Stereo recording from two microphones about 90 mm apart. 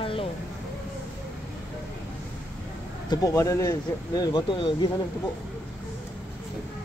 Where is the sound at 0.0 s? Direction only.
90° left.